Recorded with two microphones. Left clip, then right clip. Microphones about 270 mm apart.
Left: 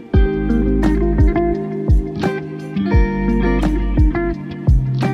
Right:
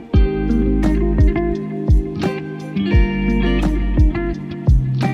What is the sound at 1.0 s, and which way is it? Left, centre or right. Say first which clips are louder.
Music: left 2 dB; centre.